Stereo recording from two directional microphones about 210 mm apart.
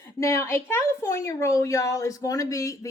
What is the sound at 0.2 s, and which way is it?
A woman's voice, 15° left (ahead or behind).